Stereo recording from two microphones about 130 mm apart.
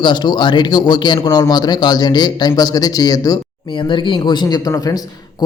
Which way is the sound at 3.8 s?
40° left (ahead or behind).